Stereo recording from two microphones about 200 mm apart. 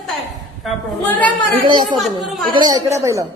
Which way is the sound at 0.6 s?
5° left (ahead or behind).